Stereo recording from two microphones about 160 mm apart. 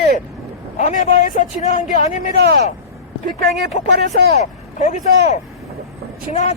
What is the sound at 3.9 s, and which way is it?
Speech, 90° right.